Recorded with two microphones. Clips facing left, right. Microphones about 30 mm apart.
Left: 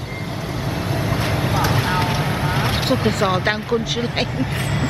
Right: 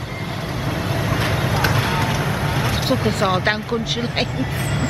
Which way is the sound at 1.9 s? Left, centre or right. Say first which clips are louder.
Left 1 dB; left.